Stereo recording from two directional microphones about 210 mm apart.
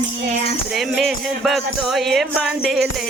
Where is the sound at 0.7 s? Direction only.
Centre (ahead or behind).